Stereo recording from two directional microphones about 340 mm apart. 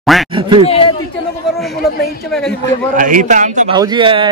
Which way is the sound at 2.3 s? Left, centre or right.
Centre.